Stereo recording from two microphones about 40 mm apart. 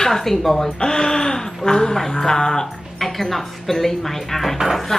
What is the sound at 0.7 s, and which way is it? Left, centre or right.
A woman's voice, centre.